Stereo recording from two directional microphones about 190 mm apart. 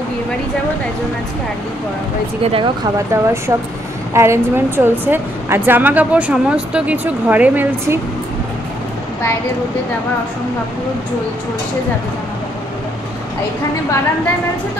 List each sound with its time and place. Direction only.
2.4 s a woman's voice: 25° right (ahead or behind); by 8.0 s 10° right (ahead or behind)